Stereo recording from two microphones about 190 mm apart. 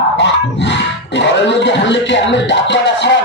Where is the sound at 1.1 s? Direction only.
70° left (ahead or behind).